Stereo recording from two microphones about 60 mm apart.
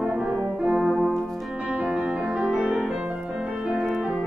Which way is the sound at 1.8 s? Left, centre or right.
Centre.